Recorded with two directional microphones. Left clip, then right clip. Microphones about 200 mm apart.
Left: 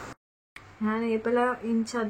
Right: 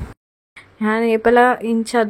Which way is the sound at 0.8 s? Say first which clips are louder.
Right 11 dB; 40° right (ahead or behind).